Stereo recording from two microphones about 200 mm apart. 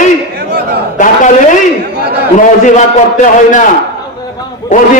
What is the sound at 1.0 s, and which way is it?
Speech, 40° left (ahead or behind).